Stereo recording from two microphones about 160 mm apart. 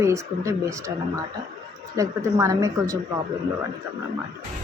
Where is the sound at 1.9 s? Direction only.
20° right (ahead or behind).